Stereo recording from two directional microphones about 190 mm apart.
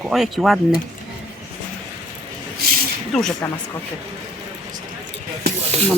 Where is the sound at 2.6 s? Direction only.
55° right (ahead or behind).